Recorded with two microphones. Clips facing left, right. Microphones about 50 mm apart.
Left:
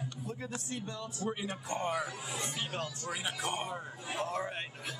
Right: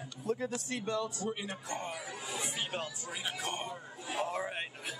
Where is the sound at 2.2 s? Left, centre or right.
Centre.